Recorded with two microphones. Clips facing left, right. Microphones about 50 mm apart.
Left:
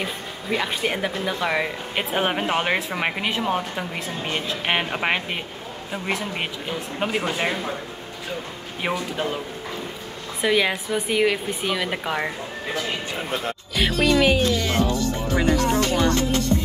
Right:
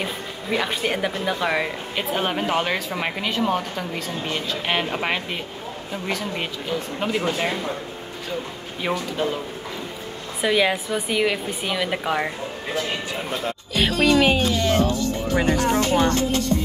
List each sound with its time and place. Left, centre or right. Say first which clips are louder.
0.0 s a woman's voice: right 1 dB; centre
2.0 s speech: left 1 dB; centre
8.8 s speech: right 1 dB; centre
10.4 s a woman's voice: right 1 dB; centre
13.7 s music: right 1 dB; centre
14.0 s speech: right 1 dB; centre
15.3 s speech: even; right